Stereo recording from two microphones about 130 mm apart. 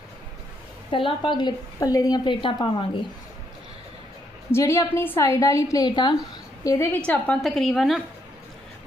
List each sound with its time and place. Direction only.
0.9 s a woman's voice: 40° left (ahead or behind)
4.5 s a woman's voice: 25° left (ahead or behind)
6.7 s a woman's voice: 20° left (ahead or behind)
7.0 s a woman's voice: 10° left (ahead or behind)